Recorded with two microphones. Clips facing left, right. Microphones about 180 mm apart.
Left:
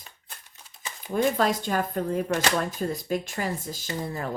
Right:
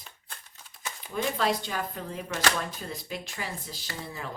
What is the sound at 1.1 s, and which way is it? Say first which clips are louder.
Speech: left 5 dB; 45° left (ahead or behind).